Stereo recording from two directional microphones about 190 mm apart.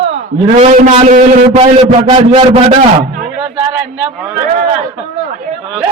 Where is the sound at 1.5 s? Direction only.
25° right (ahead or behind).